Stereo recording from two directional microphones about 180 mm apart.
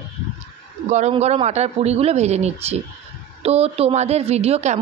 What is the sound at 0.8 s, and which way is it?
A man's voice, 40° right (ahead or behind).